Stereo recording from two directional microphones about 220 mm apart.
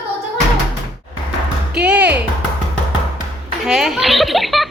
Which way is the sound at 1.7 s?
5° right (ahead or behind).